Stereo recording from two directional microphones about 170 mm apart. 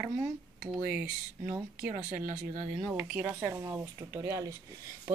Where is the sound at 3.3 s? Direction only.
15° right (ahead or behind).